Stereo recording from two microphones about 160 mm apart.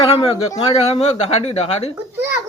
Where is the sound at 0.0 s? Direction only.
35° left (ahead or behind).